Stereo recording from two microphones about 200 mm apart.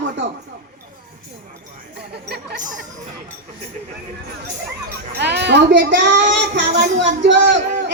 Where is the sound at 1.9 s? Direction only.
55° right (ahead or behind).